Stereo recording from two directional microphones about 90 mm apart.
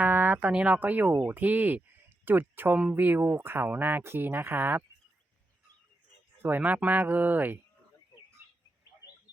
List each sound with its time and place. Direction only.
0.0 s speech: 20° right (ahead or behind)
6.6 s speech: 15° right (ahead or behind)